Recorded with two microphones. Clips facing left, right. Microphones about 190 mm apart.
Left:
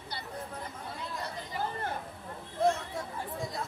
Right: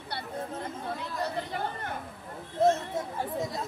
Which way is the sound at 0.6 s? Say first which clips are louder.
Right 5 dB; 65° right (ahead or behind).